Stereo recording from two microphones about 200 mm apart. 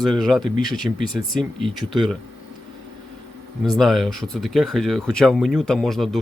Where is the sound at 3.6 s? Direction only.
Centre (ahead or behind).